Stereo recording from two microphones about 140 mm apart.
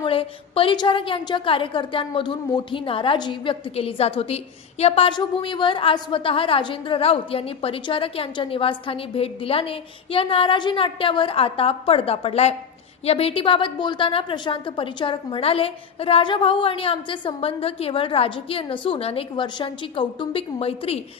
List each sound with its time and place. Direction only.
0.0 s a woman's voice: 40° left (ahead or behind)